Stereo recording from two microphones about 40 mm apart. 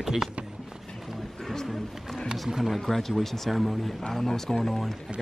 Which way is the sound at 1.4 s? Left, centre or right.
Centre.